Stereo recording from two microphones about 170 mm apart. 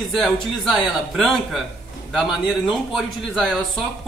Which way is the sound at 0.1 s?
Centre (ahead or behind).